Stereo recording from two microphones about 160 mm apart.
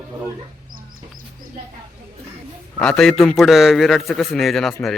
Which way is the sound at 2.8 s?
5° left (ahead or behind).